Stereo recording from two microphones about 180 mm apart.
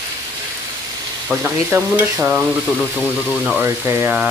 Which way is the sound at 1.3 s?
10° right (ahead or behind).